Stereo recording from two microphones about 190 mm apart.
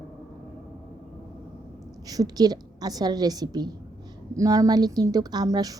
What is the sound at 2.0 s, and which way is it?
A woman's voice, 20° right (ahead or behind).